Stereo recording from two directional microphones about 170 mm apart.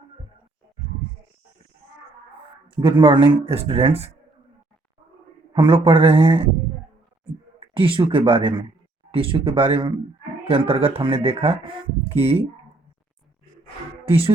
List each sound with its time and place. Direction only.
2.8 s speech: 30° right (ahead or behind)
5.5 s speech: 30° right (ahead or behind)
7.6 s speech: 30° right (ahead or behind)
14.0 s speech: 35° right (ahead or behind)